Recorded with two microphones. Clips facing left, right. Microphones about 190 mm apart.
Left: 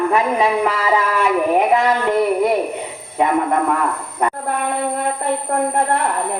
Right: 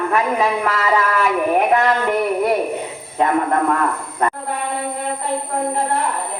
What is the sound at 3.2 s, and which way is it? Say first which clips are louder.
Speech: even; 5° left (ahead or behind).